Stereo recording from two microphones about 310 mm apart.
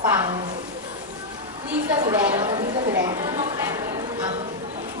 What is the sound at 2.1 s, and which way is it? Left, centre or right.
A woman's voice, centre.